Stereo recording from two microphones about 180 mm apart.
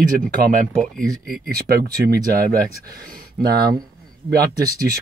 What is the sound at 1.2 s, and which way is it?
Speech, 50° right (ahead or behind).